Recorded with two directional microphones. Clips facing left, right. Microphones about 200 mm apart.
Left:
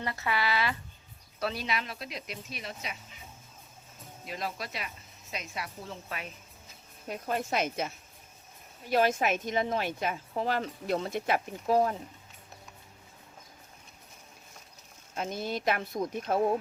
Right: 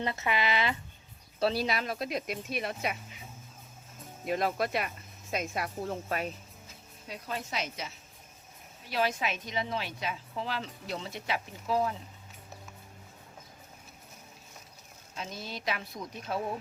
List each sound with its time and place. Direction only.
0.0 s speech: 20° right (ahead or behind)
1.4 s speech: 35° right (ahead or behind); by 2.9 s 55° right (ahead or behind)
4.3 s speech: 55° right (ahead or behind)
7.1 s a woman's voice: 50° left (ahead or behind)
15.1 s a woman's voice: 50° left (ahead or behind)